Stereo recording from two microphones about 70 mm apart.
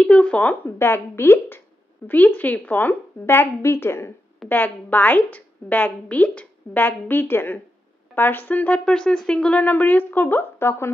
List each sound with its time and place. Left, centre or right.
0.0 s speech: centre
0.7 s a woman's voice: left
4.5 s speech: left